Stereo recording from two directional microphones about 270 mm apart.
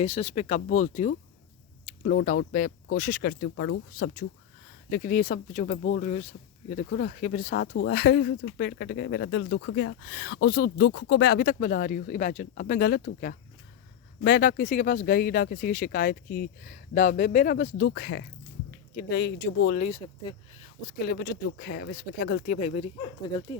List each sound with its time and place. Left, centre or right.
0.0 s speech: left
9.5 s speech: left
9.7 s speech: left
22.6 s speech: left